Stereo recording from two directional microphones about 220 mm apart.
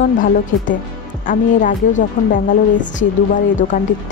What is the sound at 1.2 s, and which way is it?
Speech, 35° left (ahead or behind).